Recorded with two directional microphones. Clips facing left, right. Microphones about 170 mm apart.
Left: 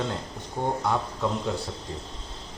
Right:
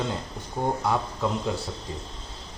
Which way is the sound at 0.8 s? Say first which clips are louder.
Right 1 dB; 5° right (ahead or behind).